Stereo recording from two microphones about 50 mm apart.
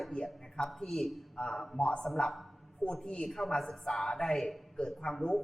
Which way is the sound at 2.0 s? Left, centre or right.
Centre.